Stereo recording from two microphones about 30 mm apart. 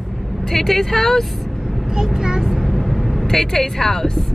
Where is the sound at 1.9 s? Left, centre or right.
Right.